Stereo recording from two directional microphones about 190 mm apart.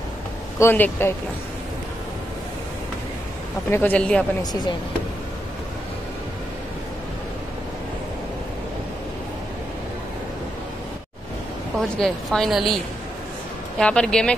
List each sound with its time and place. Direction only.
0.6 s a man's voice: 10° left (ahead or behind)
3.7 s a man's voice: 10° left (ahead or behind)
4.4 s speech: 20° left (ahead or behind)
12.0 s a woman's voice: centre (ahead or behind)
13.7 s a woman's voice: 5° left (ahead or behind)